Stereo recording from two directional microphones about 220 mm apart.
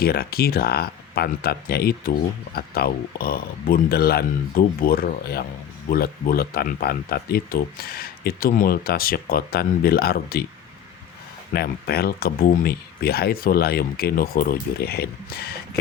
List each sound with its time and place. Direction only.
0.0 s speech: 45° left (ahead or behind)
11.5 s speech: 45° left (ahead or behind)